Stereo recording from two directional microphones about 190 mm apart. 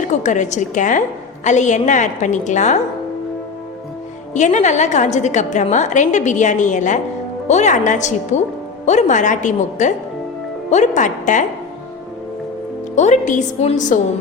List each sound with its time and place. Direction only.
0.1 s a woman's voice: 40° left (ahead or behind)
4.4 s a woman's voice: 40° left (ahead or behind)
13.0 s a woman's voice: 40° left (ahead or behind)